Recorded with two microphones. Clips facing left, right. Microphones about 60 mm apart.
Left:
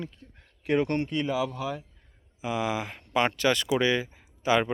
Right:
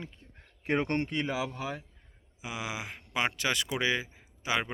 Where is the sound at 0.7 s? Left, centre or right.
Right.